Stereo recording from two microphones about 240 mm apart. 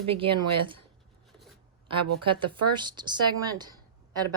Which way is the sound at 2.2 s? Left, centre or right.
Right.